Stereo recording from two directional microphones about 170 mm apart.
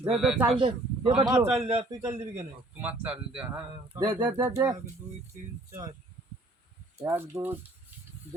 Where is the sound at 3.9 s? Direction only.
20° right (ahead or behind).